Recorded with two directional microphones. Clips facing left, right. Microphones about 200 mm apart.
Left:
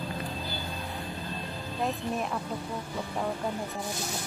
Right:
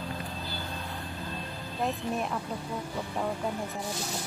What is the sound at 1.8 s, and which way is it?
Speech, centre (ahead or behind).